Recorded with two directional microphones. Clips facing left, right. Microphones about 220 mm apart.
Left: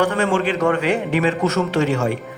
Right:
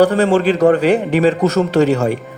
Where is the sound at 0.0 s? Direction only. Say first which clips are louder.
Right 6 dB; 35° right (ahead or behind).